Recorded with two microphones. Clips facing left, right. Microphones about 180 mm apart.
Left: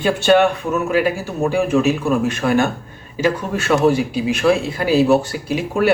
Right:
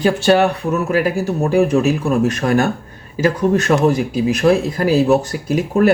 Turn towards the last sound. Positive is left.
turn(degrees=-40)  # may be behind; listen again after turning